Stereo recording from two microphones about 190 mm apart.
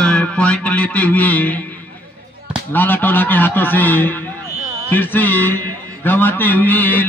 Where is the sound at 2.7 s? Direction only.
10° left (ahead or behind).